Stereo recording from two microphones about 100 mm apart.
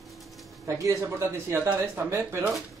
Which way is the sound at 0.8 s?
30° right (ahead or behind).